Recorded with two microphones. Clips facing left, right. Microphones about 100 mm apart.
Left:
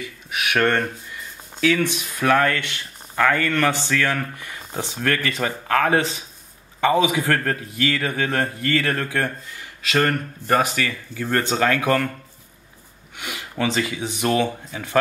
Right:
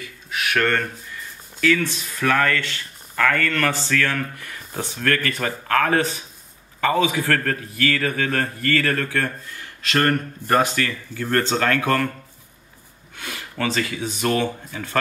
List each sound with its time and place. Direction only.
0.0 s a man's voice: 15° left (ahead or behind)
13.2 s speech: 15° left (ahead or behind)